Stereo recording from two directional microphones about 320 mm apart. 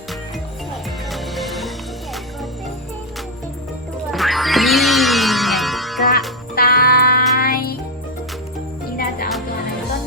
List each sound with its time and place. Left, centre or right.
1.1 s music: centre
4.1 s music: centre
6.6 s music: left
9.0 s music: left